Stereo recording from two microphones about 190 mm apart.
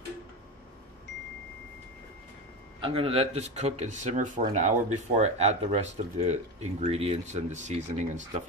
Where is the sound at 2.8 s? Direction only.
30° right (ahead or behind).